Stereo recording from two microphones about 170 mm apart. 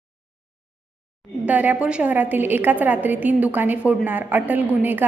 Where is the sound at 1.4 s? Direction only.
10° right (ahead or behind).